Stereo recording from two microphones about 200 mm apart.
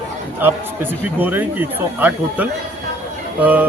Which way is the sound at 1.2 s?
10° right (ahead or behind).